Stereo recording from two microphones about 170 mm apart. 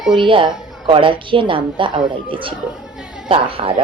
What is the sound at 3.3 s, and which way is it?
Speech, 35° right (ahead or behind).